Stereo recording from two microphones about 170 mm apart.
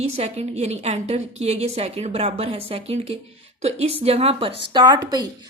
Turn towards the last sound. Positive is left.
turn(degrees=-25)  # may be behind; listen again after turning